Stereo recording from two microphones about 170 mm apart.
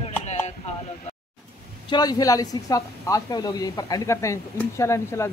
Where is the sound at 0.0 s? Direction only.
40° left (ahead or behind).